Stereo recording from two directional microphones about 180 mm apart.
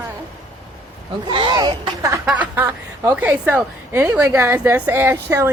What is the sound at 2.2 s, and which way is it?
A woman's voice, 10° right (ahead or behind).